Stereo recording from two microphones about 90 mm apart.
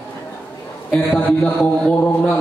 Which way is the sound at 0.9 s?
15° left (ahead or behind).